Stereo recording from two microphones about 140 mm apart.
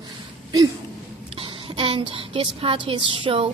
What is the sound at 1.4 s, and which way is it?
A child's voice, 35° right (ahead or behind).